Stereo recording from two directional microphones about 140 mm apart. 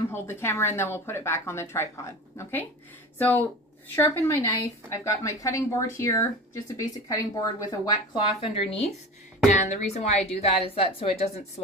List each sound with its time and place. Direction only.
0.1 s a woman's voice: 15° left (ahead or behind); by 11.6 s 45° left (ahead or behind)